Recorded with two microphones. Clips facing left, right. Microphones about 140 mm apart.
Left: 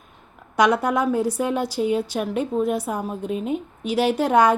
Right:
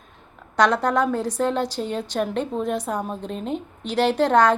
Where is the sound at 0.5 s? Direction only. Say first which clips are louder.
Even; 10° left (ahead or behind).